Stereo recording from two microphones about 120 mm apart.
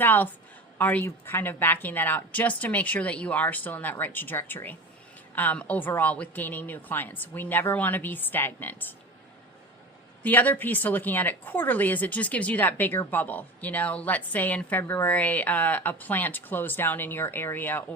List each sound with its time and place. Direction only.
0.0 s a woman's voice: 15° left (ahead or behind)
10.2 s a woman's voice: 15° left (ahead or behind)